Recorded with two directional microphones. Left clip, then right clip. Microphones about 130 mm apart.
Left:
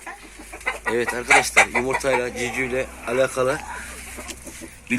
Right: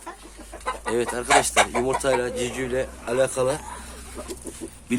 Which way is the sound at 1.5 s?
10° right (ahead or behind).